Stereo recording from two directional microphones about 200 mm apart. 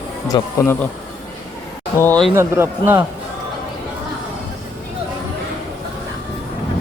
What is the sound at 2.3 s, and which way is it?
Speech, 10° right (ahead or behind).